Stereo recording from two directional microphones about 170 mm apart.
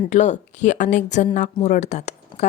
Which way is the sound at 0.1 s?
45° left (ahead or behind).